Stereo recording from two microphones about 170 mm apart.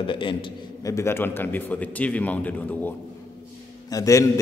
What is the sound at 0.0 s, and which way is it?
Speech, 30° left (ahead or behind).